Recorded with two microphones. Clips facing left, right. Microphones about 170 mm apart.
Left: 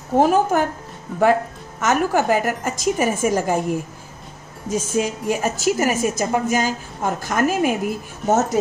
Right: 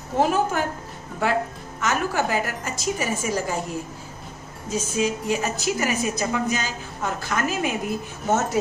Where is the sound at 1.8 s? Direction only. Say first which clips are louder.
Left 5 dB; 45° left (ahead or behind).